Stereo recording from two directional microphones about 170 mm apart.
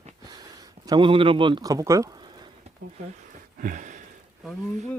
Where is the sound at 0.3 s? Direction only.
25° right (ahead or behind).